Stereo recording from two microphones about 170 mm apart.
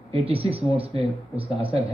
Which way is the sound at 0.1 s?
35° right (ahead or behind).